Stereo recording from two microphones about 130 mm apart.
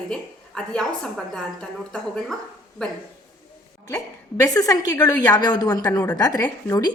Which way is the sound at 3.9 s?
25° left (ahead or behind).